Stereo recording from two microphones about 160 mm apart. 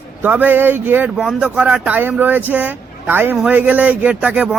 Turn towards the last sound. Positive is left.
turn(degrees=-10)  # may be behind; listen again after turning